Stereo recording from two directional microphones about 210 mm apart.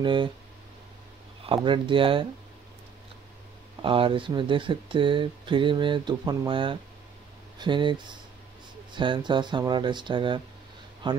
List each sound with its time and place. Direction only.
0.0 s speech: 25° right (ahead or behind)
1.4 s speech: 25° right (ahead or behind)
3.8 s speech: 25° right (ahead or behind)